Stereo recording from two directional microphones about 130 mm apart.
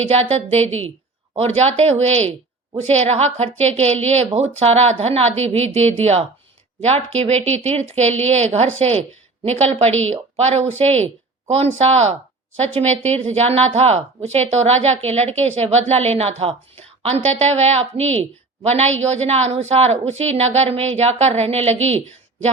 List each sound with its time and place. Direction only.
0.1 s a woman's voice: 55° right (ahead or behind)